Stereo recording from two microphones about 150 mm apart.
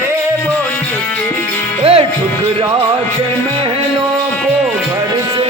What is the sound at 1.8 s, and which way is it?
Music, 40° right (ahead or behind).